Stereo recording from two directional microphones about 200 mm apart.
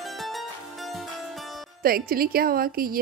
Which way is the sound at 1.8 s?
45° right (ahead or behind).